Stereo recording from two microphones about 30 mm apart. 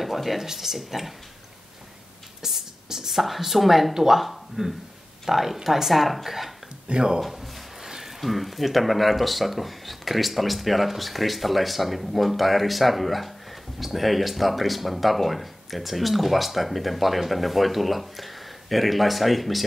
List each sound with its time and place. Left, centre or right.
0.0 s a sound: centre
0.5 s speech: centre
2.4 s writing: centre
3.1 s speech: centre
3.9 s speech: centre
5.2 s speech: centre
6.9 s speech: right
7.2 s speech: centre